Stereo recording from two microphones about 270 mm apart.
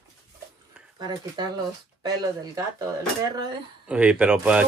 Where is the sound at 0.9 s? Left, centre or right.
Centre.